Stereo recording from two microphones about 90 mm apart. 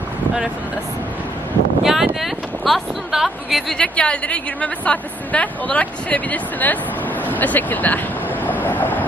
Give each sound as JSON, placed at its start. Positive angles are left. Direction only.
{"t": 1.8, "sound": "a sound", "side_deg": -5}
{"t": 2.2, "sound": "speech", "side_deg": 0}
{"t": 8.6, "sound": "vehicle", "side_deg": 20}